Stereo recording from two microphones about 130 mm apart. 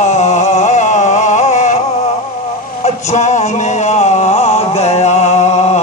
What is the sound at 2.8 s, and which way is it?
Male singing, 65° left (ahead or behind).